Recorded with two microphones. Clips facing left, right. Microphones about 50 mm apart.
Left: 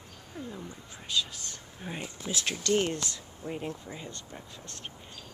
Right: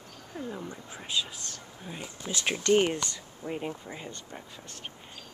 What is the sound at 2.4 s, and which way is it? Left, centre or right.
Speech, right.